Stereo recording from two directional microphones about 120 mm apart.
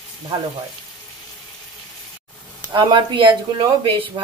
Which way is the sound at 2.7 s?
40° right (ahead or behind).